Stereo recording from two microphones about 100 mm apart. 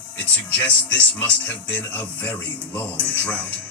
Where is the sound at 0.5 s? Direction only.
15° left (ahead or behind).